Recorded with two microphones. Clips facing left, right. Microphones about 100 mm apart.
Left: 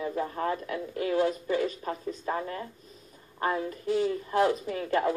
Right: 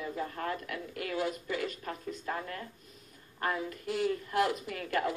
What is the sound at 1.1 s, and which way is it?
Speech, 45° left (ahead or behind).